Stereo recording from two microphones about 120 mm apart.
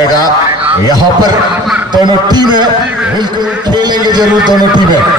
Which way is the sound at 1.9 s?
35° right (ahead or behind).